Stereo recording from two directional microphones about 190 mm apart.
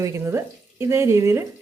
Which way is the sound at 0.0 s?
15° right (ahead or behind).